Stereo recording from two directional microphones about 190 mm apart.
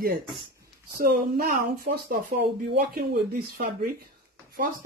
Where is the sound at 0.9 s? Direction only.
50° right (ahead or behind).